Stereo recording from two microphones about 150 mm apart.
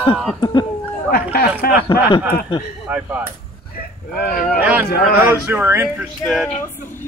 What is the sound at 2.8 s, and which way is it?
Speech, 10° right (ahead or behind).